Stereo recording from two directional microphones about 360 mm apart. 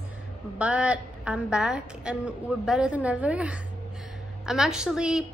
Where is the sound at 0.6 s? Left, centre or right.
Centre.